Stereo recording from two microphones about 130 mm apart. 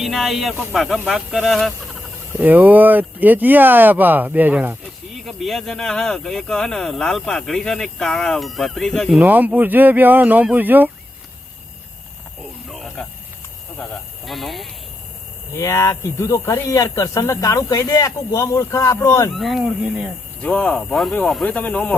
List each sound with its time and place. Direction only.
0.0 s speech: centre (ahead or behind)
2.4 s speech: 15° right (ahead or behind)
5.2 s speech: centre (ahead or behind)
9.2 s speech: 15° right (ahead or behind)
12.6 s a sound: centre (ahead or behind)
14.3 s speech: centre (ahead or behind)
15.5 s speech: 20° left (ahead or behind)
19.3 s speech: centre (ahead or behind)